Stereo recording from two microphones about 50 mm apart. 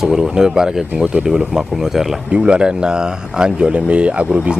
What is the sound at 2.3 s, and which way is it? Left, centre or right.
Speech, right.